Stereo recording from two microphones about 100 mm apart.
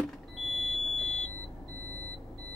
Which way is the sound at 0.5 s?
5° left (ahead or behind).